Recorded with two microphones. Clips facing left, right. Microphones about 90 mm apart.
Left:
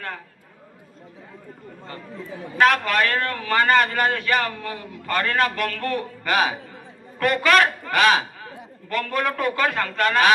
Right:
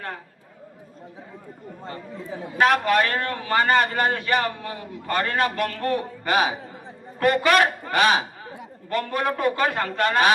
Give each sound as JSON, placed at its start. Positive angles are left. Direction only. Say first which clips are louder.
{"t": 1.8, "sound": "a man's voice", "louder": "right 1 dB", "side_deg": -30}